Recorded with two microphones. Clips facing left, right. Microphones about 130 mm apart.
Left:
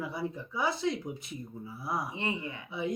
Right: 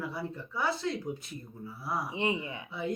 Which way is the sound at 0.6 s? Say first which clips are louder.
Left 1 dB; 15° left (ahead or behind).